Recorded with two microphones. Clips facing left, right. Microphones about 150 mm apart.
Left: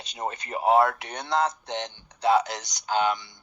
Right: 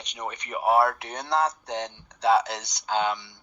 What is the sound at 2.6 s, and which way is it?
Speech, 65° right (ahead or behind).